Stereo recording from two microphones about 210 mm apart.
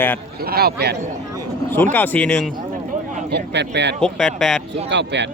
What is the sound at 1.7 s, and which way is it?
Speech, 10° left (ahead or behind).